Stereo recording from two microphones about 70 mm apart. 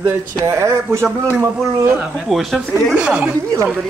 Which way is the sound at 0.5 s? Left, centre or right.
Right.